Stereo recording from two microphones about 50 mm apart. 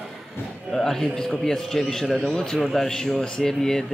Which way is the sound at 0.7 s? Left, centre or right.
Centre.